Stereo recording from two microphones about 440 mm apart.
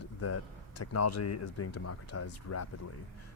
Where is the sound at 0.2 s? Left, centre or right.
Left.